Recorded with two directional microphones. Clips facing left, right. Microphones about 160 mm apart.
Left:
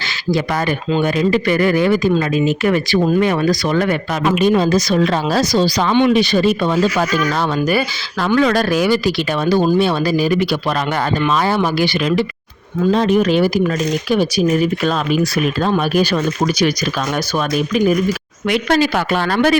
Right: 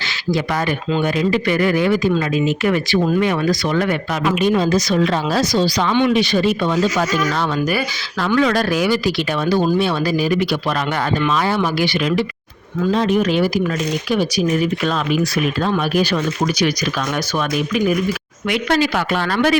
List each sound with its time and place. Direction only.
1.0 s speech: 40° left (ahead or behind)
5.9 s speech: 20° left (ahead or behind)
6.1 s speech: 40° left (ahead or behind)
7.7 s speech: 30° left (ahead or behind)
8.4 s speech: 40° left (ahead or behind)
15.6 s speech: 35° left (ahead or behind)
18.4 s speech: 40° left (ahead or behind)